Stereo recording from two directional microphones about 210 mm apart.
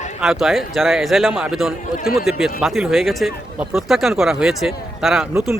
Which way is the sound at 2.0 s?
45° left (ahead or behind).